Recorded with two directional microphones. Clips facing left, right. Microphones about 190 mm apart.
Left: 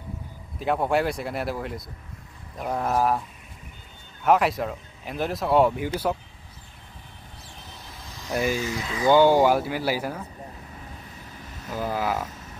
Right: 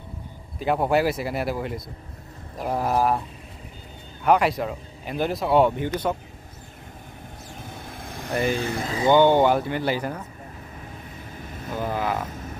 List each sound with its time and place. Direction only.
0.6 s speech: centre (ahead or behind)
4.2 s speech: centre (ahead or behind)
7.5 s vehicle: 50° right (ahead or behind)
9.1 s speech: 5° left (ahead or behind)
11.7 s speech: 5° left (ahead or behind)